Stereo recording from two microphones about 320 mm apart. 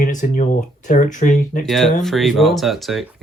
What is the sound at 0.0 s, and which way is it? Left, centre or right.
Speech, left.